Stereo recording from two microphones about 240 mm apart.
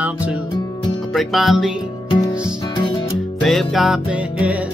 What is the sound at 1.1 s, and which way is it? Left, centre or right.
Music, centre.